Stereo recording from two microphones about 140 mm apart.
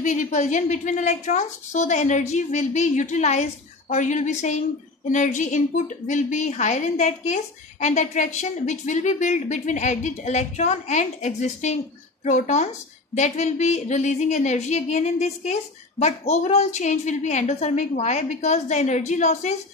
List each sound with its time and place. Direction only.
0.0 s a woman's voice: 60° left (ahead or behind)